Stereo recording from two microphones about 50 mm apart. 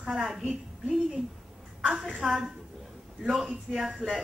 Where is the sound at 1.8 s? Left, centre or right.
Centre.